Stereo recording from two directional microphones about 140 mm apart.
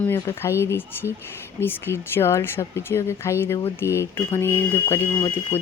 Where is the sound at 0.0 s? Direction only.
20° left (ahead or behind).